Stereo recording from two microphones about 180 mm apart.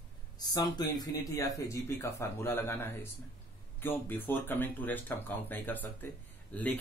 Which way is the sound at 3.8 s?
10° left (ahead or behind).